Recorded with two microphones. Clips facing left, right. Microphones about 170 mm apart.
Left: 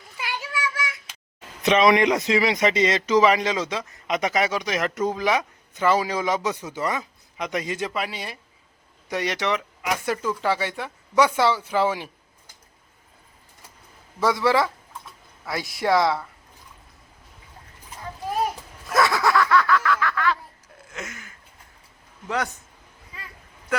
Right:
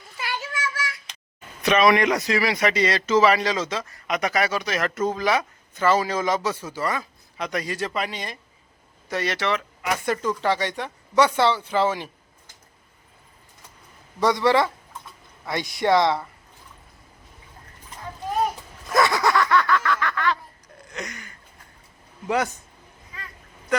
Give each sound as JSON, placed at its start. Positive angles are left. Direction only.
{"t": 0.2, "sound": "child singing", "side_deg": 15}
{"t": 1.6, "sound": "a man's voice", "side_deg": 20}
{"t": 7.9, "sound": "a man's voice", "side_deg": 5}
{"t": 14.2, "sound": "speech", "side_deg": 5}
{"t": 18.9, "sound": "a sound", "side_deg": 0}
{"t": 23.1, "sound": "a sound", "side_deg": 10}